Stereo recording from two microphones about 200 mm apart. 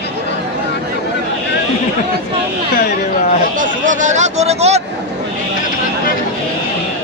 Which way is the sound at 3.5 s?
40° right (ahead or behind).